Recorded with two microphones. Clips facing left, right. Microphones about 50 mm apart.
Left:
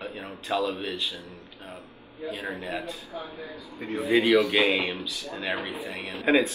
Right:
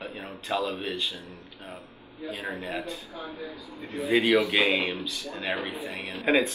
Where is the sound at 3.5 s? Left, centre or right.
Left.